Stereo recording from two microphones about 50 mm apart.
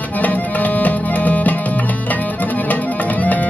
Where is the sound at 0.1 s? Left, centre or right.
Left.